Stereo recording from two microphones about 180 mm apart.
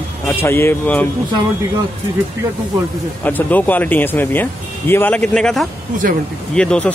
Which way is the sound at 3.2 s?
10° left (ahead or behind).